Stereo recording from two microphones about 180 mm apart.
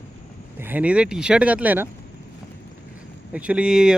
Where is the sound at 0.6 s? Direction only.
10° right (ahead or behind).